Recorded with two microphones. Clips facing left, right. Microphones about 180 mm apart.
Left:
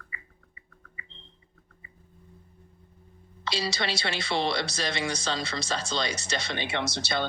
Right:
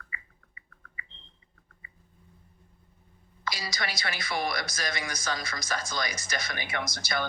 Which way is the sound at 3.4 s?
25° left (ahead or behind).